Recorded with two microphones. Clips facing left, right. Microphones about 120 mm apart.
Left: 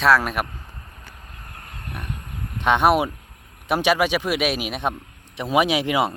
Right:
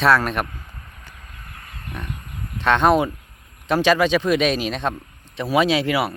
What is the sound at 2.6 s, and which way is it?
Speech, 15° left (ahead or behind).